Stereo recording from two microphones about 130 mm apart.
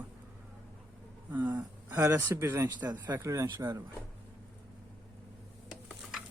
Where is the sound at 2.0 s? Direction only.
25° right (ahead or behind).